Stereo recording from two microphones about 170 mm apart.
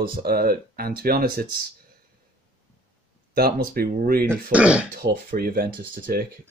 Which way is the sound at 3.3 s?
60° right (ahead or behind).